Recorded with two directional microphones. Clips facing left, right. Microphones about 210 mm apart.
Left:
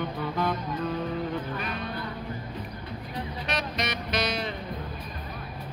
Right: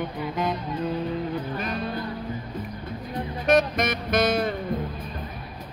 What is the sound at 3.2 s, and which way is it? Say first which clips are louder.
Music: right 12 dB; 50° right (ahead or behind).